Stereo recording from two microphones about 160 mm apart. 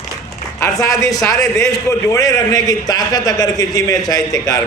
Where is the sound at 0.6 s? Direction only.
20° left (ahead or behind).